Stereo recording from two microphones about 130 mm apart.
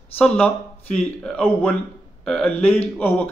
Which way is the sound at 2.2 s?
5° left (ahead or behind).